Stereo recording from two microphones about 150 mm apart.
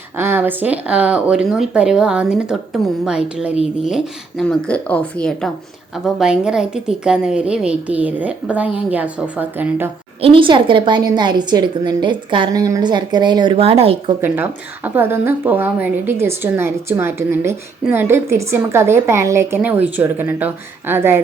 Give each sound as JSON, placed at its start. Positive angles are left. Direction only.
{"t": 0.2, "sound": "speech", "side_deg": -15}
{"t": 4.4, "sound": "speech", "side_deg": 10}
{"t": 10.2, "sound": "a woman's voice", "side_deg": -35}
{"t": 14.2, "sound": "speech", "side_deg": -15}